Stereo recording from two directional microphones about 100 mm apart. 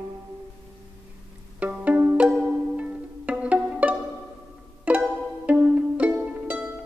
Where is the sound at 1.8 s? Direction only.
15° right (ahead or behind).